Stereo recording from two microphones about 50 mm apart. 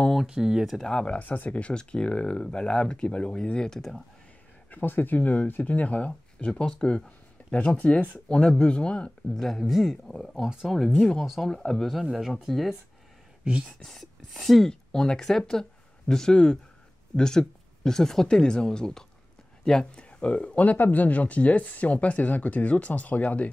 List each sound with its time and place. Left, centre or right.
0.3 s speech: centre
0.7 s speech: centre
1.2 s speech: left; by 3.8 s centre
4.6 s speech: left; by 9.4 s centre
9.4 s speech: centre
9.7 s speech: centre
13.4 s a sound: right
13.9 s speech: centre; by 23.5 s left